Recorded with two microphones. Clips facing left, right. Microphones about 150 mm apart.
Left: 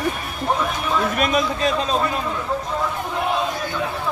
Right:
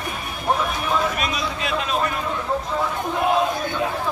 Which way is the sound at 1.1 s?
50° left (ahead or behind).